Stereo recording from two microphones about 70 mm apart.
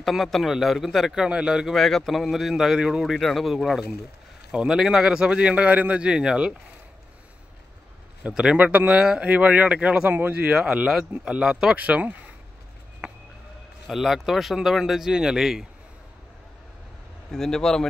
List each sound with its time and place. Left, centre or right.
0.0 s a man's voice: centre
1.8 s a man's voice: centre
8.2 s a man's voice: centre
10.0 s a man's voice: right; by 11.7 s centre
11.7 s speech: right
13.0 s a sound: centre
13.8 s a man's voice: centre
17.3 s speech: centre